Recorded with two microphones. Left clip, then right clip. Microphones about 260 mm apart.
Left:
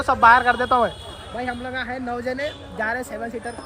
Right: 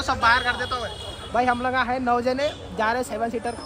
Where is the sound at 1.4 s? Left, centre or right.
Centre.